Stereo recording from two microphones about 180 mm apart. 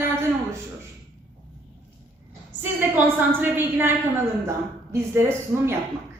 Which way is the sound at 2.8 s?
10° right (ahead or behind).